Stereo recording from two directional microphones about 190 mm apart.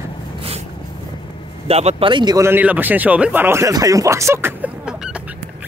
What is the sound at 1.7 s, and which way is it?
Speech, 30° right (ahead or behind).